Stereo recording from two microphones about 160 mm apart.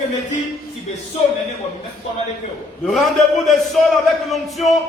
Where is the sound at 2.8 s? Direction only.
Centre (ahead or behind).